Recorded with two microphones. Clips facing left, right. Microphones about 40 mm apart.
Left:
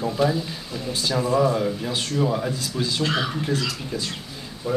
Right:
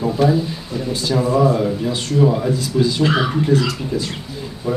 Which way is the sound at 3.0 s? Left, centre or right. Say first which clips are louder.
Right 7 dB; centre.